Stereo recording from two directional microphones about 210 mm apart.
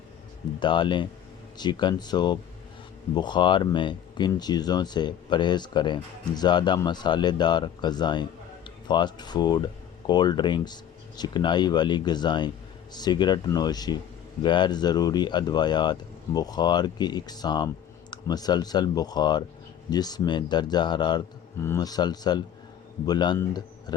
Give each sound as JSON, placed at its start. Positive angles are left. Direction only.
{"t": 0.6, "sound": "speech", "side_deg": 20}